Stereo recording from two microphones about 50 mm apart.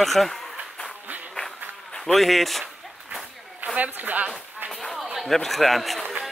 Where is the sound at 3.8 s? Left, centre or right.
Right.